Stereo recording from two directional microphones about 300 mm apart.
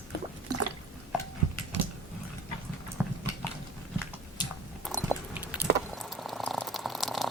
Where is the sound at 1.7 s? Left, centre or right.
Right.